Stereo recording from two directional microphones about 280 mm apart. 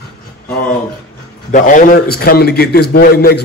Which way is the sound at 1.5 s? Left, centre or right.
Left.